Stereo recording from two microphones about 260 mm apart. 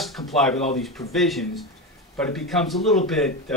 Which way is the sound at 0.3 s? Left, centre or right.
Centre.